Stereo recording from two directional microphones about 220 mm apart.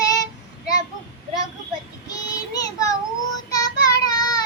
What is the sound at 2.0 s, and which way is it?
Child singing, 15° left (ahead or behind).